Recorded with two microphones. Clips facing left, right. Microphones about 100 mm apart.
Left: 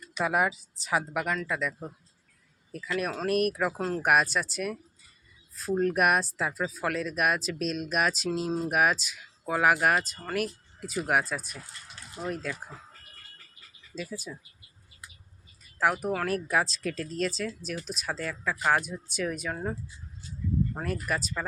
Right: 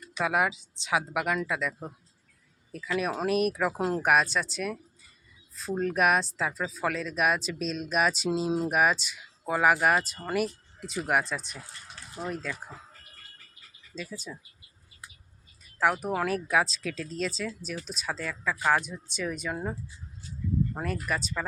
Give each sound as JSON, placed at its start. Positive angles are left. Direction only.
{"t": 0.2, "sound": "speech", "side_deg": 0}
{"t": 1.1, "sound": "speech", "side_deg": -10}
{"t": 3.8, "sound": "speech", "side_deg": -10}
{"t": 4.0, "sound": "speech", "side_deg": 5}
{"t": 8.4, "sound": "speech", "side_deg": -10}
{"t": 8.7, "sound": "speech", "side_deg": 0}
{"t": 13.9, "sound": "speech", "side_deg": 5}
{"t": 15.8, "sound": "speech", "side_deg": 5}
{"t": 20.8, "sound": "speech", "side_deg": 5}